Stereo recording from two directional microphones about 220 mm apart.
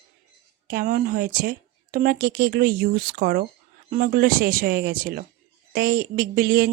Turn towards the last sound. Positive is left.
turn(degrees=-45)  # may be behind; listen again after turning